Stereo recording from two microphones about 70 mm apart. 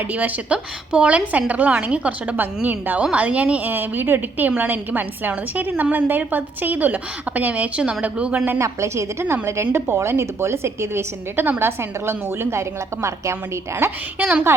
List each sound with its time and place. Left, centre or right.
0.0 s a woman's voice: right
8.5 s a woman's voice: right